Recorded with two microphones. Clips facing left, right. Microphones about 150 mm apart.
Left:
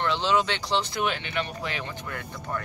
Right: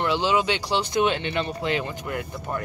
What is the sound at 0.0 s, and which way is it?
Speech, 10° right (ahead or behind).